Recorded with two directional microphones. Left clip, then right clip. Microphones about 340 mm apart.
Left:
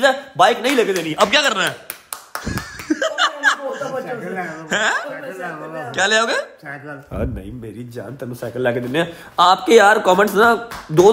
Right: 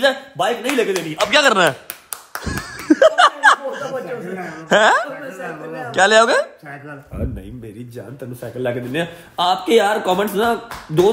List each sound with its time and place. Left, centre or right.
0.0 s a man's voice: centre
2.3 s a sound: centre
4.5 s a man's voice: centre
7.1 s a man's voice: left
8.2 s a man's voice: centre